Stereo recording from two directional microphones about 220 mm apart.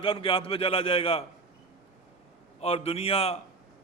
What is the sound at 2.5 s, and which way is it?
Speech, 25° left (ahead or behind).